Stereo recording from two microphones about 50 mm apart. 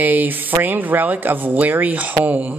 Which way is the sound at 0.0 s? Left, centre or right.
Right.